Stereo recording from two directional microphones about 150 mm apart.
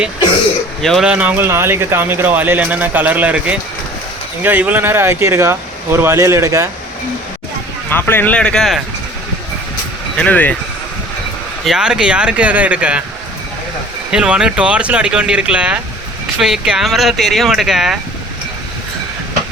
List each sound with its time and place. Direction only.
0.8 s speech: centre (ahead or behind); by 6.7 s 20° right (ahead or behind)
7.9 s speech: 15° left (ahead or behind)
10.2 s speech: 10° left (ahead or behind)
11.6 s speech: 5° right (ahead or behind)
14.1 s speech: 5° right (ahead or behind)